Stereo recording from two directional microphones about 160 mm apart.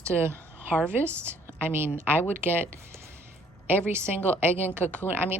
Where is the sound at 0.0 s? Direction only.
15° right (ahead or behind).